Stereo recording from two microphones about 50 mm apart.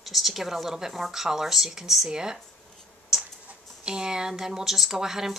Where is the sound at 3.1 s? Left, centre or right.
Centre.